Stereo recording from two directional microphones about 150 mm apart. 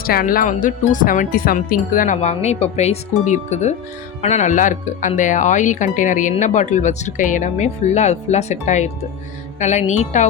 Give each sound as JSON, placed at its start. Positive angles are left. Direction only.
{"t": 0.0, "sound": "speech", "side_deg": 75}
{"t": 2.3, "sound": "speech", "side_deg": 45}